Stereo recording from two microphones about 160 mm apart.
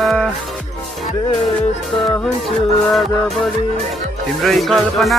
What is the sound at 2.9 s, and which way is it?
Music, centre (ahead or behind).